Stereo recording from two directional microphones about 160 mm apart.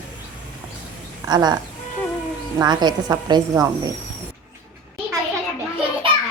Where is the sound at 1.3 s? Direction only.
25° right (ahead or behind).